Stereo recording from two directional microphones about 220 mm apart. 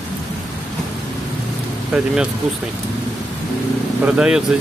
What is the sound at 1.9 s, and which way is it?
Speech, 5° right (ahead or behind).